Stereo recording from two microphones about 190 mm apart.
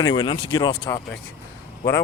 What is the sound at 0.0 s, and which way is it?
Speech, 25° left (ahead or behind).